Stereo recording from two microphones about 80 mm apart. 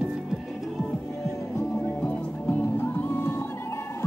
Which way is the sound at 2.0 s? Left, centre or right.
Left.